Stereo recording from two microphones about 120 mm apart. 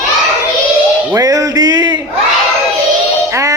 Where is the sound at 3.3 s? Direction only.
25° right (ahead or behind).